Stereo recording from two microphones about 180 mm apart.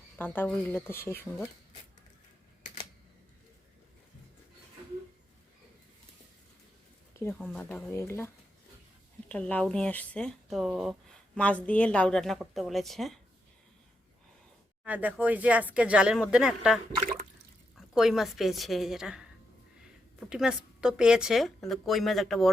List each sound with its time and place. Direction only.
0.2 s speech: 10° left (ahead or behind)
7.2 s speech: 15° left (ahead or behind)
9.3 s speech: 5° left (ahead or behind)
14.8 s speech: 10° right (ahead or behind)
17.0 s water: 50° right (ahead or behind)
17.7 s speech: centre (ahead or behind)